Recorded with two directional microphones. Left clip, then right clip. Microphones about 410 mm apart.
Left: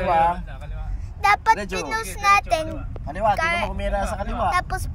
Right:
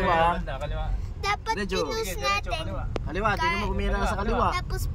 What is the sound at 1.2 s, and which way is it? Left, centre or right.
Speech, centre.